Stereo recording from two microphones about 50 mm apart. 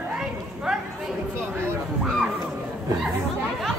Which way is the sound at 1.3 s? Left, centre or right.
Right.